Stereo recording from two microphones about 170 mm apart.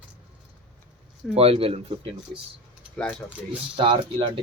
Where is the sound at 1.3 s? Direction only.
35° right (ahead or behind).